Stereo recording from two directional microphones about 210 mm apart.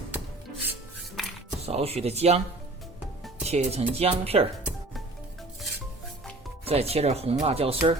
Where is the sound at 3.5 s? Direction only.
30° right (ahead or behind).